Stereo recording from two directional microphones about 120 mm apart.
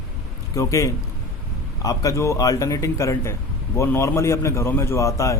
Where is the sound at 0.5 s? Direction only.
25° left (ahead or behind).